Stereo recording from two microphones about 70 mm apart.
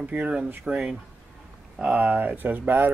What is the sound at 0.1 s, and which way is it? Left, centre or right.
Speech, centre.